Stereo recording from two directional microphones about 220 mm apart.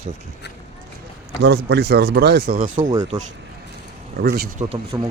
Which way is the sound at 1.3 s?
50° right (ahead or behind).